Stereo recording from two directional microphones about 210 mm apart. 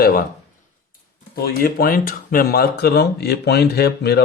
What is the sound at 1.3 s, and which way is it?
Speech, 45° left (ahead or behind).